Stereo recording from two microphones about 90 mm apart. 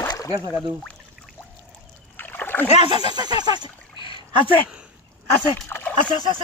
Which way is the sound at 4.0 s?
65° left (ahead or behind).